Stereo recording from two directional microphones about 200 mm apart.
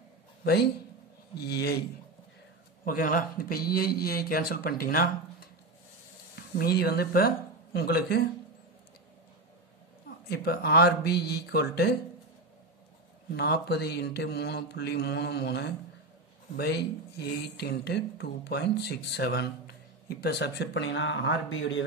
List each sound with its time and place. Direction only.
0.4 s a man's voice: 55° left (ahead or behind)
2.8 s speech: 45° left (ahead or behind)
6.3 s speech: 50° left (ahead or behind)
10.2 s speech: 55° left (ahead or behind)
13.3 s speech: 55° left (ahead or behind)